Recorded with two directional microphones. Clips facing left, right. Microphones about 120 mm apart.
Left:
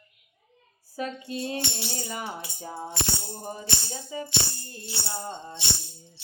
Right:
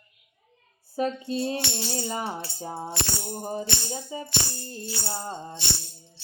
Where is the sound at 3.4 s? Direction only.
30° right (ahead or behind).